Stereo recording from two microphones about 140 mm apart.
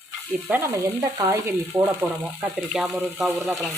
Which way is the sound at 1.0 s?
20° right (ahead or behind).